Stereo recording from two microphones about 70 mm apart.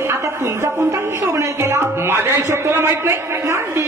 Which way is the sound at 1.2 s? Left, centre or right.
Right.